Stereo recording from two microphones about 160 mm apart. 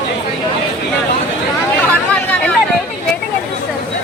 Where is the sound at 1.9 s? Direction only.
10° left (ahead or behind).